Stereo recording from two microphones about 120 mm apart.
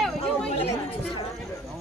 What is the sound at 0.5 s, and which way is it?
Chatter, 55° left (ahead or behind).